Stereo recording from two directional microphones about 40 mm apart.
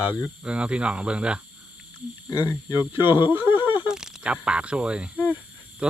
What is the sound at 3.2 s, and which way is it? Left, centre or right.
Speech, right.